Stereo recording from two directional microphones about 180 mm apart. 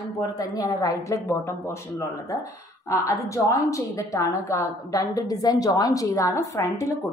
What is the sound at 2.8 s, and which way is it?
A woman's voice, 15° left (ahead or behind).